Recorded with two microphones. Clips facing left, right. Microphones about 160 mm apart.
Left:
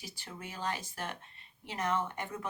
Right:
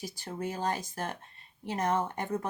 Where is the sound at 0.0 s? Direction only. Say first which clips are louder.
Right 10 dB; 40° right (ahead or behind).